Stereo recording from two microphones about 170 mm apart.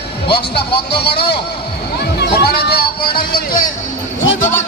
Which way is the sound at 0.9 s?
70° left (ahead or behind).